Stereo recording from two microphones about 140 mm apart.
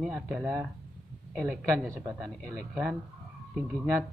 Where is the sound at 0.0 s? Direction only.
5° right (ahead or behind).